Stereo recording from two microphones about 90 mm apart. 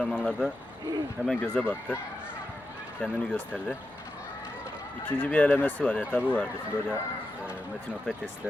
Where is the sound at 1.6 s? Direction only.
20° left (ahead or behind).